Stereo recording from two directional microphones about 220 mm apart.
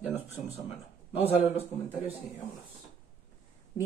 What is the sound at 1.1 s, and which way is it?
Speech, 25° left (ahead or behind).